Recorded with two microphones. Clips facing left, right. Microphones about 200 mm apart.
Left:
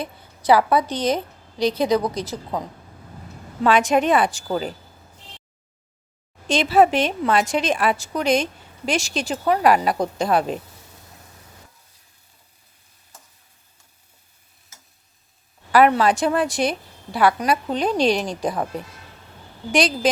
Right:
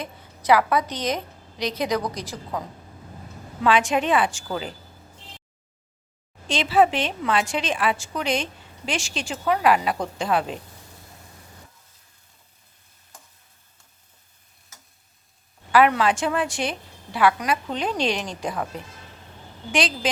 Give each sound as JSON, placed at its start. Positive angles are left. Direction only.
{"t": 0.0, "sound": "a woman's voice", "side_deg": 30}
{"t": 3.6, "sound": "a woman's voice", "side_deg": 40}
{"t": 6.5, "sound": "a woman's voice", "side_deg": 45}
{"t": 15.7, "sound": "a woman's voice", "side_deg": 40}
{"t": 19.7, "sound": "a woman's voice", "side_deg": 40}